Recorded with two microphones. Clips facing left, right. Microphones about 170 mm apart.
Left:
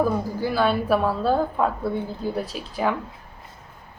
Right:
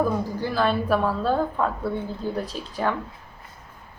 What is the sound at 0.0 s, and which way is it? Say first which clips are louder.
A woman's voice: left 1 dB; 5° left (ahead or behind).